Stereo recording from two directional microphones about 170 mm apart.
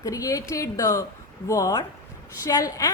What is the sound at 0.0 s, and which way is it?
A woman's voice, 20° left (ahead or behind).